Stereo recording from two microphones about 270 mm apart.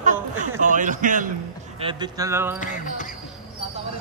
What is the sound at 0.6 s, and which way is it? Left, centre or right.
Speech, right.